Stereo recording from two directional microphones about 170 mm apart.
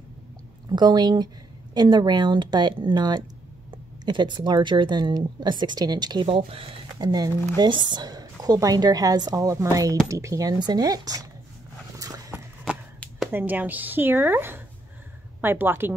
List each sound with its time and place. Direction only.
0.7 s speech: 25° right (ahead or behind)
12.0 s dog: 20° right (ahead or behind)
13.3 s speech: 10° right (ahead or behind)